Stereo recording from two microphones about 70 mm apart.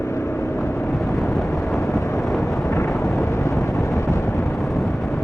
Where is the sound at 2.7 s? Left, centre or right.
Left.